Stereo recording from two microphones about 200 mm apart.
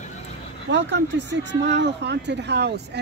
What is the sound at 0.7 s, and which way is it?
Speech, 60° right (ahead or behind).